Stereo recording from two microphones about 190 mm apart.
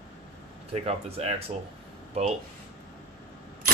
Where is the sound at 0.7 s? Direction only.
35° right (ahead or behind).